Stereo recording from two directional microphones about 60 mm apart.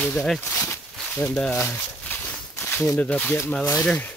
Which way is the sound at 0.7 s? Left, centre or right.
Left.